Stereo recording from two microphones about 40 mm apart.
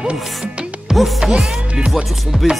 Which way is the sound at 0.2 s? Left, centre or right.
Centre.